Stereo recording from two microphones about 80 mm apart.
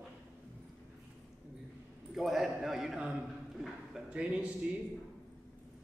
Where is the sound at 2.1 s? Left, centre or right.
Centre.